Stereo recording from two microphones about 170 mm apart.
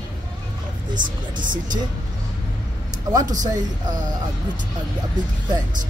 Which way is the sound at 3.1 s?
20° right (ahead or behind).